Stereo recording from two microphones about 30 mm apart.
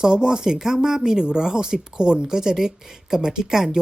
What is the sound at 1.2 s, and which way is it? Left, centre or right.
Speech, right.